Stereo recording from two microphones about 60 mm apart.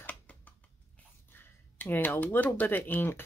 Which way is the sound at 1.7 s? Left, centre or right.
Left.